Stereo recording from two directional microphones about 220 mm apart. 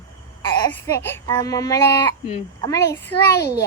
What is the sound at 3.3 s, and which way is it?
Speech, 45° left (ahead or behind).